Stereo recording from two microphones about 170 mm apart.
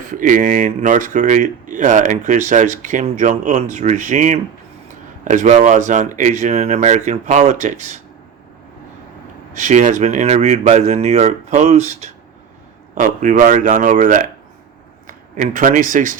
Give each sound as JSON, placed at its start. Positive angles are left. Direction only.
{"t": 0.1, "sound": "speech", "side_deg": -50}
{"t": 9.6, "sound": "speech", "side_deg": -45}